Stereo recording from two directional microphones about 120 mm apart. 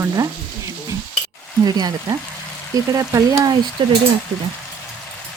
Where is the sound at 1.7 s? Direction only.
35° right (ahead or behind).